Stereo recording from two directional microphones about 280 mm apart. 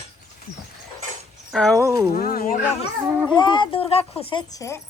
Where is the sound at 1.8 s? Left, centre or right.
Centre.